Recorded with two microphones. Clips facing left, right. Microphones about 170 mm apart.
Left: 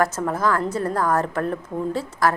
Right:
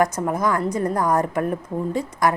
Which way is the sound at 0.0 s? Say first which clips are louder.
Right 1 dB; 15° right (ahead or behind).